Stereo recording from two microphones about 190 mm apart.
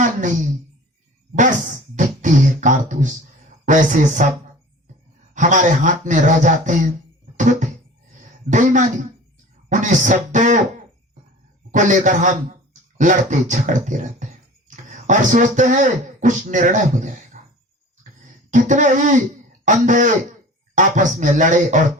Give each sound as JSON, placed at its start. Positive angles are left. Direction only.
{"t": 0.0, "sound": "speech", "side_deg": -40}
{"t": 2.0, "sound": "beatboxing", "side_deg": -40}
{"t": 3.7, "sound": "speech", "side_deg": -40}
{"t": 7.3, "sound": "music", "side_deg": -40}
{"t": 8.4, "sound": "speech", "side_deg": -40}
{"t": 11.7, "sound": "speech", "side_deg": -40}
{"t": 18.5, "sound": "speech", "side_deg": -40}